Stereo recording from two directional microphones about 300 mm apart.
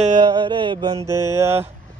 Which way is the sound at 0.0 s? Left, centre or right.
Centre.